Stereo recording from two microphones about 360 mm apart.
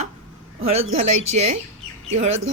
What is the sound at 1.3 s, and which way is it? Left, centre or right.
Speech, centre.